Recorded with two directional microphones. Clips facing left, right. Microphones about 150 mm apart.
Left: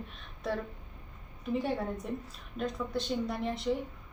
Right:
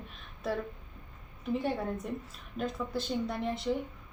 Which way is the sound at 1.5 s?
Centre (ahead or behind).